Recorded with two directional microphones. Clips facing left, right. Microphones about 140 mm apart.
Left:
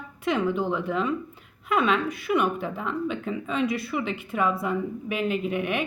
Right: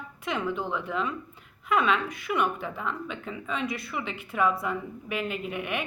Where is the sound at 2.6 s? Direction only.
35° left (ahead or behind).